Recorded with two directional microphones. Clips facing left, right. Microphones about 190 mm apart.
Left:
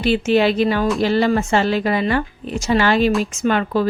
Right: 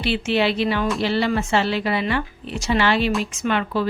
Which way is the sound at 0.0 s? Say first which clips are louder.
Left 5 dB; 45° left (ahead or behind).